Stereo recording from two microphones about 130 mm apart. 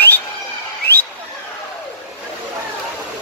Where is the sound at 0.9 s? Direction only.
15° left (ahead or behind).